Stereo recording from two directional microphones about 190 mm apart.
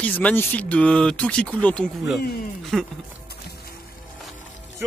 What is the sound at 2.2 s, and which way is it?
Speech, 55° left (ahead or behind).